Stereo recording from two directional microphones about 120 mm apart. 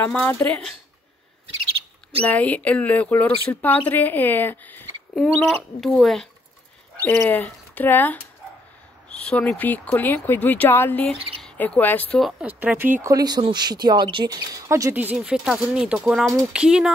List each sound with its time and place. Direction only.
0.0 s speech: 10° left (ahead or behind)
2.2 s speech: 15° left (ahead or behind)
5.1 s speech: centre (ahead or behind)
7.1 s speech: 15° left (ahead or behind)
12.2 s speech: 5° right (ahead or behind)
13.1 s speech: 35° right (ahead or behind)
15.1 s speech: 5° right (ahead or behind)